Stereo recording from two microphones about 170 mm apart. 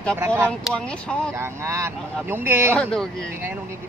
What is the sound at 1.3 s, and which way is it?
Speech, 15° right (ahead or behind).